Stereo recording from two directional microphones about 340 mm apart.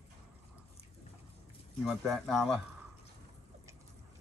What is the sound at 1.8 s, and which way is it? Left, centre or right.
Speech, centre.